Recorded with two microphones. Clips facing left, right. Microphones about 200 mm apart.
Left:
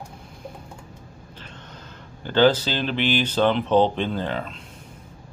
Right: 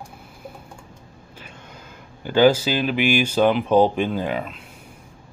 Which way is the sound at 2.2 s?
10° right (ahead or behind).